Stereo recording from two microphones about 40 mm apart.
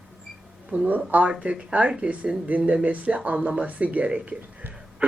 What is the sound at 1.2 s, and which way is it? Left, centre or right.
Speech, right.